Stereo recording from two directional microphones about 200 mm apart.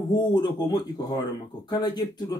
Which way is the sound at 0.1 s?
20° left (ahead or behind).